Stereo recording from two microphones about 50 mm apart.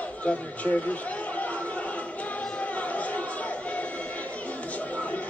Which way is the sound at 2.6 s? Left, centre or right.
Left.